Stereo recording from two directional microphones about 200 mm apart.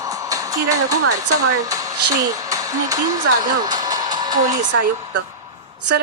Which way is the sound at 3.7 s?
20° right (ahead or behind).